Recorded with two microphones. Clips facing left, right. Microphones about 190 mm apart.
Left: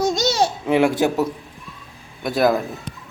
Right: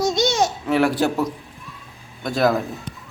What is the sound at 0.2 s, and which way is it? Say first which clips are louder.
Babbling: even; 35° left (ahead or behind).